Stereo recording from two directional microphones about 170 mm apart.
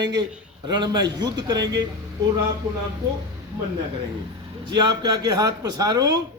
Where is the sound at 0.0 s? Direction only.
25° right (ahead or behind).